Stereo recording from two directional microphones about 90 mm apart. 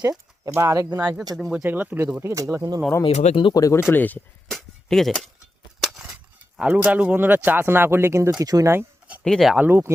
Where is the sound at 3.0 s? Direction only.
70° left (ahead or behind).